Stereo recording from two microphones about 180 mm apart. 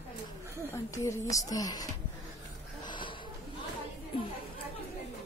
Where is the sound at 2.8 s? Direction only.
25° left (ahead or behind).